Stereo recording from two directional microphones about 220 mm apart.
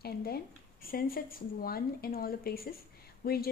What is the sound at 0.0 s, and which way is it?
A woman's voice, 45° left (ahead or behind).